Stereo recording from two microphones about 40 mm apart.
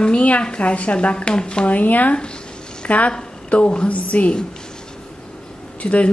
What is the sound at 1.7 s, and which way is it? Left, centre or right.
Speech, left.